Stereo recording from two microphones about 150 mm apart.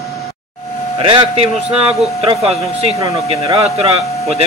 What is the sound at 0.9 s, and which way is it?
Speech, 35° right (ahead or behind).